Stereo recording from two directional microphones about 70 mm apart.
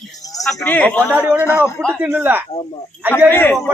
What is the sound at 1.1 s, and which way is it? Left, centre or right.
Speech, right.